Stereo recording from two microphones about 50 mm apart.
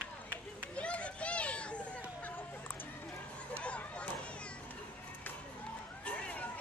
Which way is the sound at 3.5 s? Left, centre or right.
Left.